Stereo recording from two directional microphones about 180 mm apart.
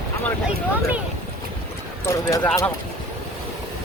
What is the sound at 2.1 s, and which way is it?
Speech, 20° left (ahead or behind).